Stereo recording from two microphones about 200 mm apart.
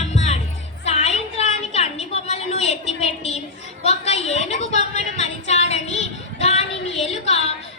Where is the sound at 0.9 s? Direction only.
35° left (ahead or behind).